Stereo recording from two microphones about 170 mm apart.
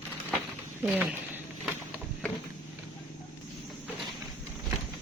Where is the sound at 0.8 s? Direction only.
10° right (ahead or behind).